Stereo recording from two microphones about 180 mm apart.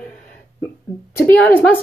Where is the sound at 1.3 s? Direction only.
10° left (ahead or behind).